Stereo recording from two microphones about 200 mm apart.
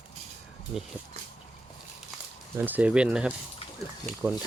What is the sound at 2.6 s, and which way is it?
Speech, 10° right (ahead or behind).